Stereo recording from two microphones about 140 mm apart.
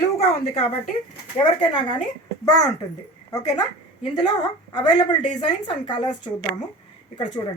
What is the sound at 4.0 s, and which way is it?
Speech, 30° left (ahead or behind).